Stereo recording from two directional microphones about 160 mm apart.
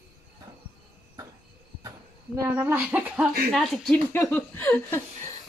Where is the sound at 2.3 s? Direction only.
15° right (ahead or behind); by 4.0 s centre (ahead or behind).